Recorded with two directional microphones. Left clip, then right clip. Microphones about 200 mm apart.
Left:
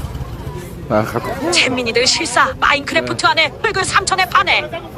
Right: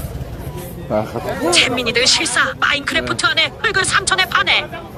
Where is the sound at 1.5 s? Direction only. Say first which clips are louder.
Even; centre (ahead or behind).